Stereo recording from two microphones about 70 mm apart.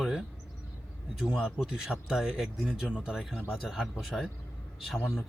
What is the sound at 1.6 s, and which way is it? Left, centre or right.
A man's voice, centre.